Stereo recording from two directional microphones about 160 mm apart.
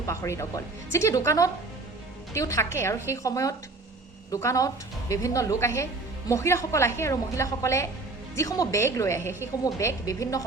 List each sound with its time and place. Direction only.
0.0 s a woman's voice: 20° left (ahead or behind)